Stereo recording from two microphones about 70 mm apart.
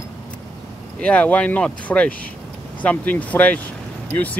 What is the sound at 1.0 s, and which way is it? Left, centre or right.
Speech, centre.